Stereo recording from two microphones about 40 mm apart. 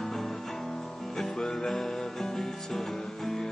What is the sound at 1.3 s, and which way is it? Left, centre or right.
Music, centre.